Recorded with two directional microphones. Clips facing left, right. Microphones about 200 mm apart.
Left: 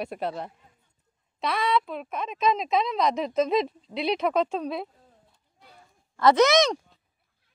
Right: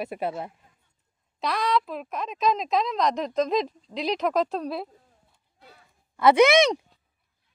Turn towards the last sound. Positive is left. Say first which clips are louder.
# right 2 dB
turn(degrees=-15)  # may be behind; listen again after turning